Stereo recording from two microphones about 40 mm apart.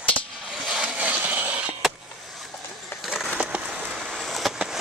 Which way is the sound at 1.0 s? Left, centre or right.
Right.